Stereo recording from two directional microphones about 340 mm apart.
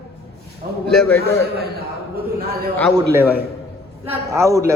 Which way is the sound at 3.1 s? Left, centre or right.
Centre.